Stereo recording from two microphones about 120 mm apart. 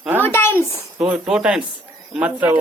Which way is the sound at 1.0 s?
5° right (ahead or behind).